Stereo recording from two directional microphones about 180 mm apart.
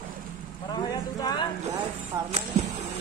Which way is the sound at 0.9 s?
20° left (ahead or behind).